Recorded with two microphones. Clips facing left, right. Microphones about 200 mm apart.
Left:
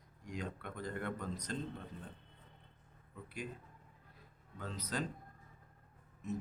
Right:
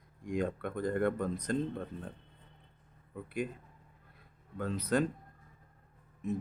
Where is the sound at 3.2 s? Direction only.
55° right (ahead or behind).